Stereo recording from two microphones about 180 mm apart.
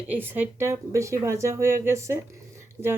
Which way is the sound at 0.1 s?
10° right (ahead or behind).